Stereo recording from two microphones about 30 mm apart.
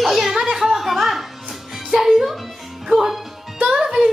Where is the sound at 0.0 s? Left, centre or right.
Centre.